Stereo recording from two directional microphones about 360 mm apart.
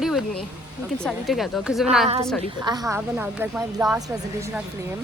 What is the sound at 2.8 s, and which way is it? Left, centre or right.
A woman's voice, centre.